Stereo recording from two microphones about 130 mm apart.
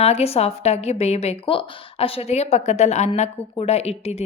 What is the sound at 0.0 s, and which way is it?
Speech, 50° left (ahead or behind).